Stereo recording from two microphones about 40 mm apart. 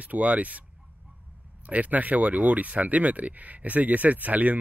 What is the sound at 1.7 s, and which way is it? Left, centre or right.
Speech, right.